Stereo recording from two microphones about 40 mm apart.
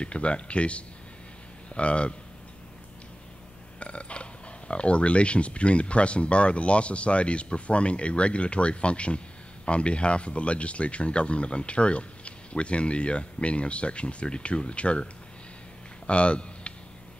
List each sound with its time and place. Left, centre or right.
0.0 s speech: left
3.8 s speech: left
16.1 s a sound: left